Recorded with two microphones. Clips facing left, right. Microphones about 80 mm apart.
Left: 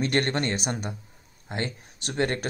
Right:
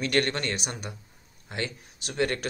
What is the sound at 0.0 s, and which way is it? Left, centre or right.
Speech, left.